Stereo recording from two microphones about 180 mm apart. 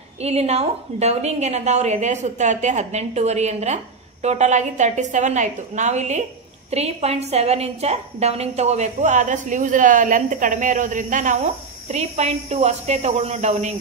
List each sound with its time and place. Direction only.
0.2 s a woman's voice: 35° right (ahead or behind)